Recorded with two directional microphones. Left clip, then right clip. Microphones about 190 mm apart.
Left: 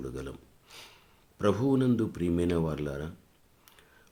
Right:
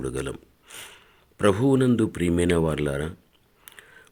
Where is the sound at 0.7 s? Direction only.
20° right (ahead or behind).